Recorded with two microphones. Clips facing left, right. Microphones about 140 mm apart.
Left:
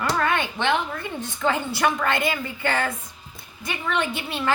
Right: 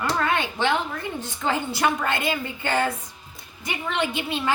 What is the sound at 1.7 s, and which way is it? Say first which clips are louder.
A woman's voice: left 1 dB; 25° right (ahead or behind).